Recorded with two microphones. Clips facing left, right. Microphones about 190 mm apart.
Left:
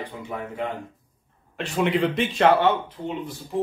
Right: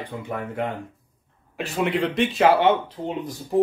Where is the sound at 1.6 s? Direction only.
5° right (ahead or behind).